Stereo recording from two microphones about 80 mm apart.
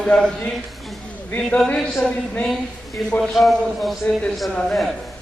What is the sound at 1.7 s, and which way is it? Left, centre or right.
Speech, centre.